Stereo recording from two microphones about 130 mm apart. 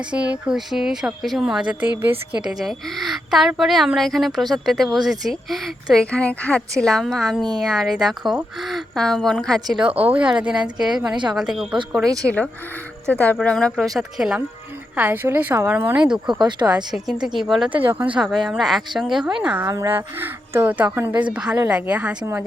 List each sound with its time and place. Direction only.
0.1 s speech: 10° right (ahead or behind)
10.0 s speech: 10° right (ahead or behind)
12.0 s speech: 25° right (ahead or behind)
13.1 s speech: 10° left (ahead or behind); by 16.0 s 15° right (ahead or behind)
16.0 s speech: 5° right (ahead or behind)
16.4 s speech: 35° right (ahead or behind)
16.7 s speech: 5° right (ahead or behind)
19.6 s speech: 25° right (ahead or behind)